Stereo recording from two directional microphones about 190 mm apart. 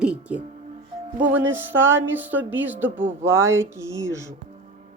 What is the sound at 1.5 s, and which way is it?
Speech, 10° right (ahead or behind).